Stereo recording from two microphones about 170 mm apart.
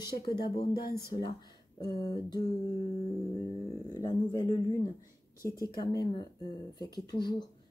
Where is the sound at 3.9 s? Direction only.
20° left (ahead or behind).